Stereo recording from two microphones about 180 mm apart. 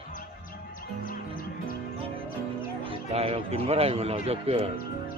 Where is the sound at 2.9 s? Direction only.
35° right (ahead or behind).